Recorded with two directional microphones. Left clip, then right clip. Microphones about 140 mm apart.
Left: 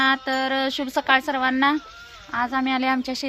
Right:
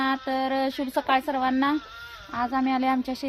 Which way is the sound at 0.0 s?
20° left (ahead or behind).